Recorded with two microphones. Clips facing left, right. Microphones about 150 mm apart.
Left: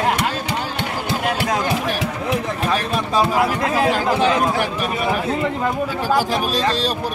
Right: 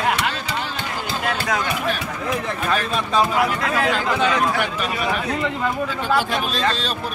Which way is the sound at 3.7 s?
30° left (ahead or behind).